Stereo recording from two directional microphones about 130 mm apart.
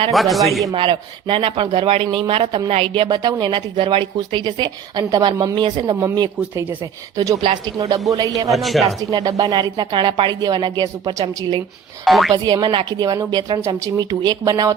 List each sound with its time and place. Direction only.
0.1 s a man's voice: centre (ahead or behind)
0.7 s speech: 40° right (ahead or behind)
8.4 s a man's voice: centre (ahead or behind)
9.0 s speech: 25° right (ahead or behind)
12.0 s a man's voice: centre (ahead or behind)
12.3 s speech: 30° right (ahead or behind)
14.1 s speech: 35° right (ahead or behind)